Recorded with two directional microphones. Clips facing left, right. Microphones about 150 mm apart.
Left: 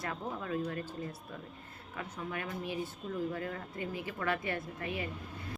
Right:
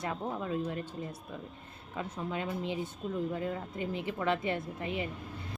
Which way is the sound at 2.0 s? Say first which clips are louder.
Right 4 dB; 20° right (ahead or behind).